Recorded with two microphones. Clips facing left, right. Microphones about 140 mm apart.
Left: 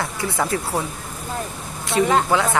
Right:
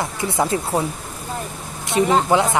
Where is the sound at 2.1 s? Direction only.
20° right (ahead or behind).